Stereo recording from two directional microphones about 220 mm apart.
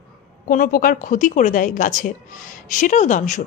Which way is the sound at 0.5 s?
40° left (ahead or behind).